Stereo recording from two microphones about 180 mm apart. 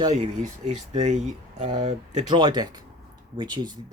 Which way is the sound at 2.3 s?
25° right (ahead or behind).